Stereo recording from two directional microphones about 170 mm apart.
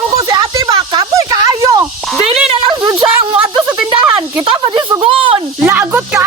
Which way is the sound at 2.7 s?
20° right (ahead or behind).